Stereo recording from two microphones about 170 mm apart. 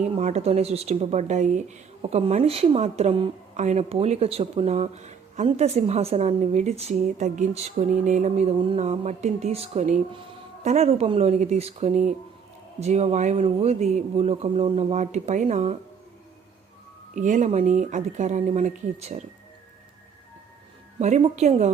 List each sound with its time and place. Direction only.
0.2 s speech: 40° right (ahead or behind)
17.2 s speech: 45° right (ahead or behind)
21.0 s speech: 40° right (ahead or behind)